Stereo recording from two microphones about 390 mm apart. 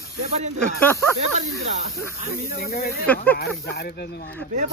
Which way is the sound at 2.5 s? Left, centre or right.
Left.